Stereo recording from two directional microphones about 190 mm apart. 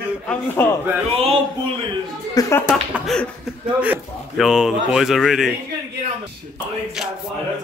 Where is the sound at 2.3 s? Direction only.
20° left (ahead or behind).